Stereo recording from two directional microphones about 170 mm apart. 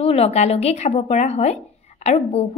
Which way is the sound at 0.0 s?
40° left (ahead or behind).